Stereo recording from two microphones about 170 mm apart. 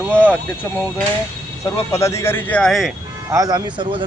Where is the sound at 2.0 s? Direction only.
15° left (ahead or behind).